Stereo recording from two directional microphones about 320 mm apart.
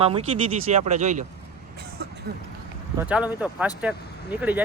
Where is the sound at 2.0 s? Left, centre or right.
Right.